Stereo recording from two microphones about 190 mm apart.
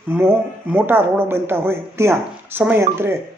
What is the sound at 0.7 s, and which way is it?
Speech, 10° right (ahead or behind).